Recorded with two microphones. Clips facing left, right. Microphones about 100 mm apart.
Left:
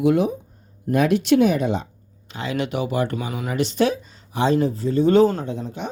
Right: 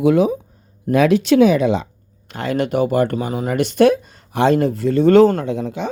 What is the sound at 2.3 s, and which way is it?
Speech, 55° right (ahead or behind).